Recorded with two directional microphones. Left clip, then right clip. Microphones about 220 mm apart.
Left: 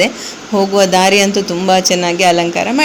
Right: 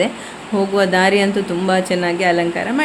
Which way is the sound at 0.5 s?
20° left (ahead or behind).